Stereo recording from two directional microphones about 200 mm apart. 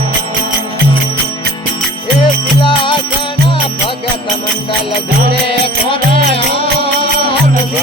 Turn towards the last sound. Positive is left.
turn(degrees=30)  # may be behind; listen again after turning